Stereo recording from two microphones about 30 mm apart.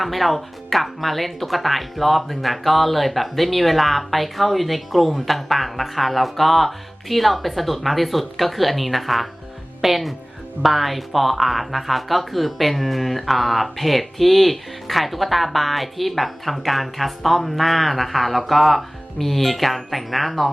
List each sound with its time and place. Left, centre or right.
0.0 s speech: centre